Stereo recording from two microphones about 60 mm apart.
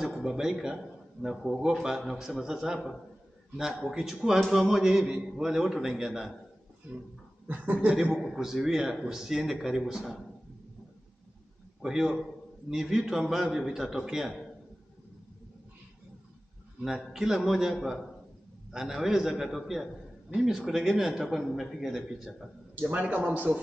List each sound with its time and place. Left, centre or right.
0.0 s a man's voice: centre
3.9 s a man's voice: centre
7.4 s a man's voice: right
8.2 s speech: centre
11.8 s speech: centre
16.8 s a man's voice: centre
22.8 s a man's voice: right